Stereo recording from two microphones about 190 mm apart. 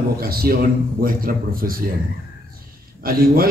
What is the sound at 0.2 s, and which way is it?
A man's voice, 50° right (ahead or behind).